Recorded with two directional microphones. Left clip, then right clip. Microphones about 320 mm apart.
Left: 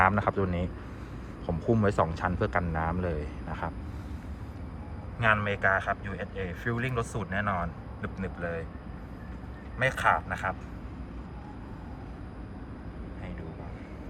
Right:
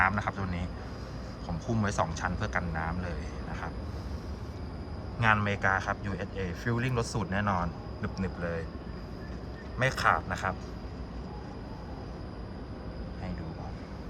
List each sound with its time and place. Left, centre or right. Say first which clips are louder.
0.0 s a man's voice: left 4 dB; centre
1.7 s a man's voice: left 4 dB; centre
5.2 s a man's voice: left 1 dB; centre
9.7 s a man's voice: left 1 dB; centre